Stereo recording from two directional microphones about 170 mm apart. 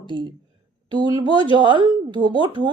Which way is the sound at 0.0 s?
30° right (ahead or behind).